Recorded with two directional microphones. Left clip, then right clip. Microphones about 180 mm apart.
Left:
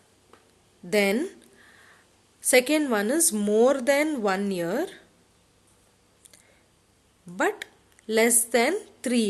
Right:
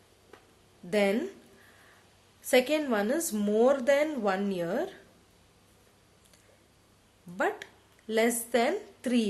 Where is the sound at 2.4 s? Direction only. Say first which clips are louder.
Left 4 dB; 35° left (ahead or behind).